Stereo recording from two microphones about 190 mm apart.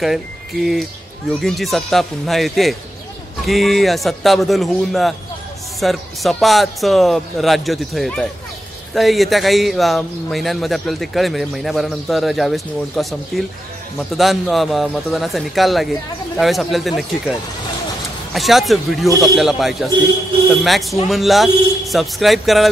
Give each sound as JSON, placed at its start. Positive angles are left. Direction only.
{"t": 1.3, "sound": "speech", "side_deg": 0}